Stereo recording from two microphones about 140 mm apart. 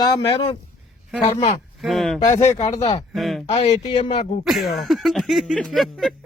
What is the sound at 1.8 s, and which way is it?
Speech, centre (ahead or behind).